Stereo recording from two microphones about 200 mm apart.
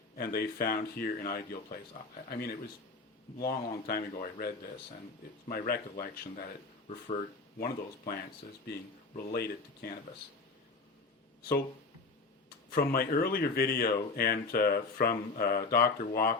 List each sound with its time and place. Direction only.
0.2 s speech: 50° left (ahead or behind)
7.6 s speech: 50° left (ahead or behind)
12.7 s speech: 45° left (ahead or behind)